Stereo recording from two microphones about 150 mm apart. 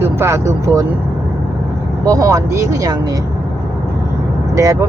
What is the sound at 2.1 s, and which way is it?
Speech, 20° right (ahead or behind).